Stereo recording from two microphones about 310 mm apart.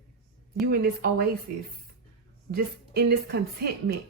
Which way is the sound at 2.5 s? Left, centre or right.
Right.